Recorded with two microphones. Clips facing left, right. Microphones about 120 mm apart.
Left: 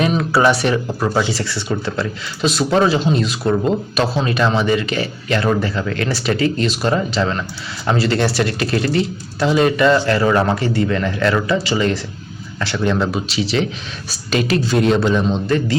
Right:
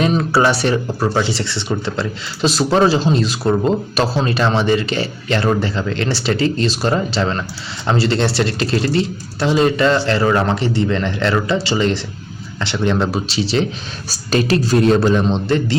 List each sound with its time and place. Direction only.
0.0 s speech: 30° right (ahead or behind)